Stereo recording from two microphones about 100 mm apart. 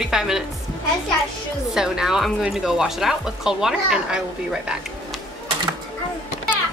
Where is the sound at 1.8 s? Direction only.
5° right (ahead or behind).